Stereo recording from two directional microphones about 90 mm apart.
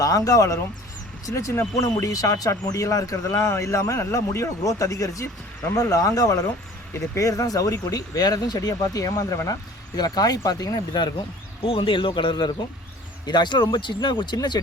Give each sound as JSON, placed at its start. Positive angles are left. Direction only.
{"t": 0.0, "sound": "speech", "side_deg": 40}
{"t": 11.6, "sound": "speech", "side_deg": 85}